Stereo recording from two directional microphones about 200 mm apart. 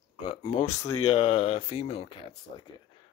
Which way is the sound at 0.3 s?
25° left (ahead or behind).